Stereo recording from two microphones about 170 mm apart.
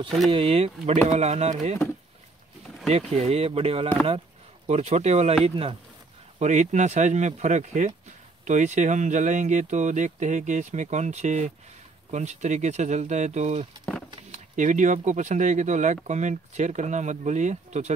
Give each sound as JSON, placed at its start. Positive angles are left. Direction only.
{"t": 0.3, "sound": "speech", "side_deg": -35}
{"t": 2.9, "sound": "speech", "side_deg": -40}